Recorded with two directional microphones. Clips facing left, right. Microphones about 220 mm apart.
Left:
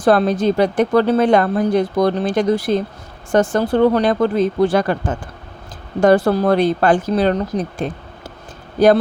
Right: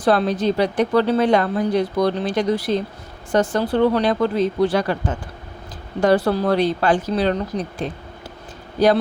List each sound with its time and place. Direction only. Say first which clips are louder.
0.0 s a woman's voice: left 3 dB; 50° left (ahead or behind)